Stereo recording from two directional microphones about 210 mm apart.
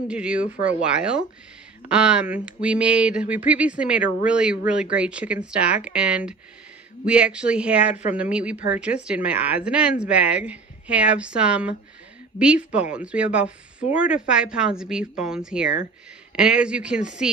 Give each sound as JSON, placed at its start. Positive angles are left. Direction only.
{"t": 0.1, "sound": "a woman's voice", "side_deg": -5}
{"t": 7.9, "sound": "speech", "side_deg": 35}
{"t": 8.2, "sound": "a woman's voice", "side_deg": -5}